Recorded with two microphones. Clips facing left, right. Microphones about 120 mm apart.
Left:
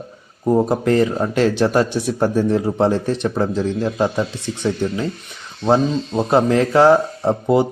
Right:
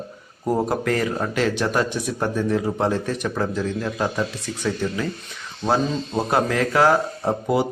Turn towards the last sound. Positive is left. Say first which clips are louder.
# left 5 dB
turn(degrees=25)  # may be behind; listen again after turning